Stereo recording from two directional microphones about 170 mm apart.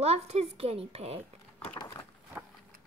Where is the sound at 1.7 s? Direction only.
25° left (ahead or behind).